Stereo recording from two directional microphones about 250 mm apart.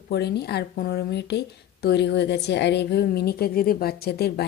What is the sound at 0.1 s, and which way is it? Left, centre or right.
A woman's voice, left.